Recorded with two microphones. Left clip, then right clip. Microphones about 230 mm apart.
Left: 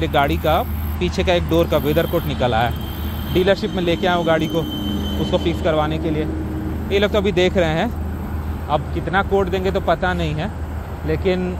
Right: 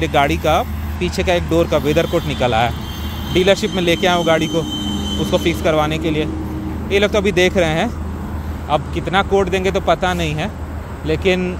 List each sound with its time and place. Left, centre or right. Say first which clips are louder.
0.0 s speech: right 2 dB; centre